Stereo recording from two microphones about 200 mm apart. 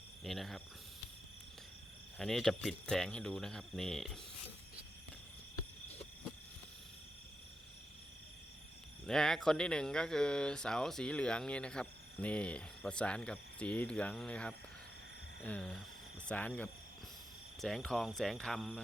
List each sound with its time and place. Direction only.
0.2 s speech: centre (ahead or behind)
2.1 s speech: centre (ahead or behind)
9.0 s speech: 5° left (ahead or behind)